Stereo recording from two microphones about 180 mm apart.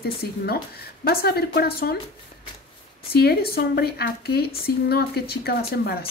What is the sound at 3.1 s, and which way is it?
A woman's voice, 60° left (ahead or behind).